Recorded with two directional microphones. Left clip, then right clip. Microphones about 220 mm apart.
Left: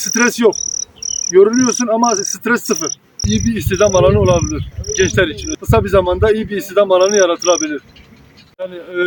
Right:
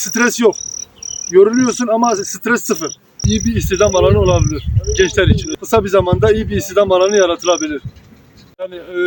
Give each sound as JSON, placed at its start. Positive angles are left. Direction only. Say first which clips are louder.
{"t": 0.0, "sound": "cricket", "louder": "even", "side_deg": 0}
{"t": 1.0, "sound": "insect", "louder": "left 5 dB", "side_deg": 30}
{"t": 1.3, "sound": "cricket", "louder": "even", "side_deg": -5}